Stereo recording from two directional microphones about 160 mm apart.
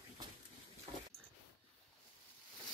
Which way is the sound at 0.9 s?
40° right (ahead or behind).